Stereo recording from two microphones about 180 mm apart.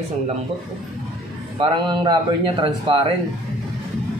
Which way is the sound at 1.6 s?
25° right (ahead or behind).